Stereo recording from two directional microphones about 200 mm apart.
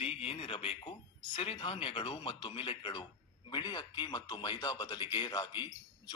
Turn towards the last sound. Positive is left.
turn(degrees=20)  # may be behind; listen again after turning